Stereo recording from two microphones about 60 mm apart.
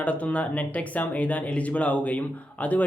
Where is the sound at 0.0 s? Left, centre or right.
Left.